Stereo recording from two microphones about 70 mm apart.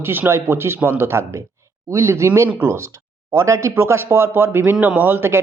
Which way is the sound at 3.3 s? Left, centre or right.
Right.